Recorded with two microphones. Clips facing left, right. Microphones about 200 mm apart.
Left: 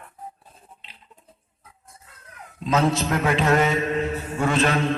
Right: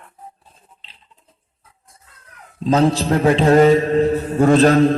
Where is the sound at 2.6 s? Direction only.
35° right (ahead or behind).